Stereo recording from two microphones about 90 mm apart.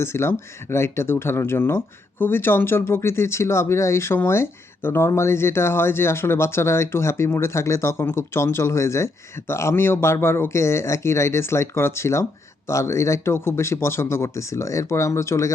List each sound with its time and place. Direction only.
0.0 s speech: 30° left (ahead or behind)